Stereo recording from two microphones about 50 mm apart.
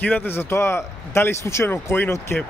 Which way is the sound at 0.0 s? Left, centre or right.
Left.